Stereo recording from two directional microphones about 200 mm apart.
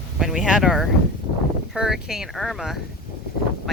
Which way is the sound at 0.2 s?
Centre (ahead or behind).